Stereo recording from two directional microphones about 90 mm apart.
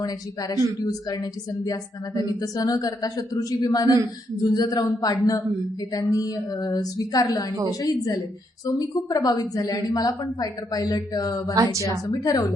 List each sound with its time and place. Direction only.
0.0 s a woman's voice: 45° left (ahead or behind)